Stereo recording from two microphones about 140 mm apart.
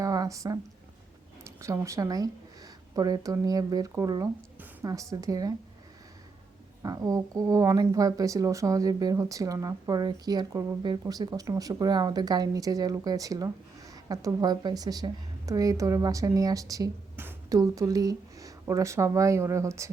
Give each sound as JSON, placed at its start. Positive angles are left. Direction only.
{"t": 0.0, "sound": "a sound", "side_deg": -25}
{"t": 1.5, "sound": "a woman's voice", "side_deg": -20}
{"t": 6.8, "sound": "speech", "side_deg": -25}